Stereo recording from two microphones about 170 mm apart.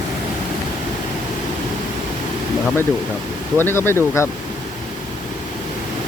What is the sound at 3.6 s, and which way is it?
Speech, 15° left (ahead or behind).